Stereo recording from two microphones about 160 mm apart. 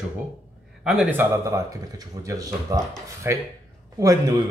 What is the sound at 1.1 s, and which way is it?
Speech, 20° right (ahead or behind).